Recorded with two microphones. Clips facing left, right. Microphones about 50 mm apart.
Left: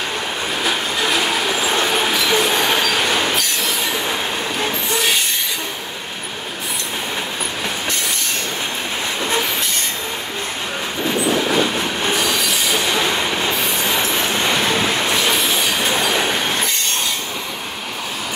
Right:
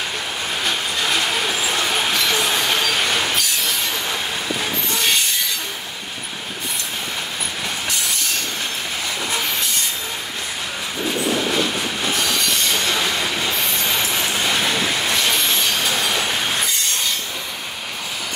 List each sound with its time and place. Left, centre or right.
0.7 s train: centre
12.2 s train wheels squealing: centre
12.9 s train: left
13.6 s train: centre
14.0 s music: left
14.5 s vehicle: centre
15.1 s train: centre
15.8 s train: centre